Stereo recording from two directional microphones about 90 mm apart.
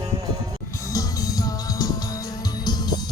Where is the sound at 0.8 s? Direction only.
40° left (ahead or behind).